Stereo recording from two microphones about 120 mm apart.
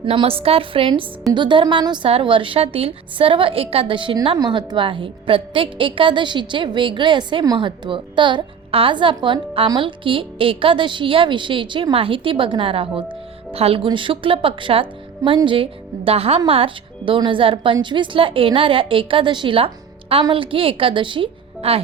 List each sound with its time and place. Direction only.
0.0 s a woman's voice: 50° right (ahead or behind)